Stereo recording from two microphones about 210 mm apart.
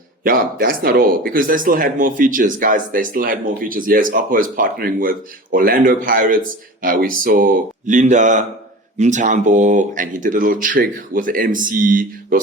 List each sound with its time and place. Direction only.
0.3 s speech: 45° right (ahead or behind)